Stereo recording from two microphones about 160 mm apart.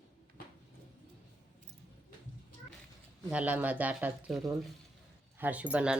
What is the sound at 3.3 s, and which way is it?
Speech, 10° right (ahead or behind).